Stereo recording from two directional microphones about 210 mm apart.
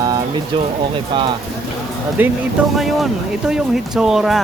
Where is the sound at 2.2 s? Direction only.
10° right (ahead or behind).